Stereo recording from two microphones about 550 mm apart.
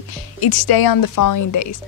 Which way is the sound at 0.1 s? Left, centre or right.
Left.